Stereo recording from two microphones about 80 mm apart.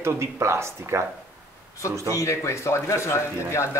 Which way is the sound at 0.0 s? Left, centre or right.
Right.